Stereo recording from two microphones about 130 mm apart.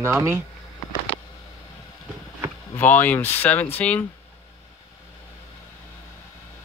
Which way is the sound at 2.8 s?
15° left (ahead or behind).